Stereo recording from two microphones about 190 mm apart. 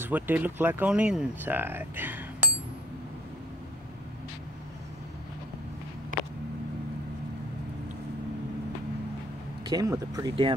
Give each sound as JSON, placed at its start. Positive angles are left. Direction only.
{"t": 0.0, "sound": "speech", "side_deg": -10}
{"t": 9.7, "sound": "speech", "side_deg": -20}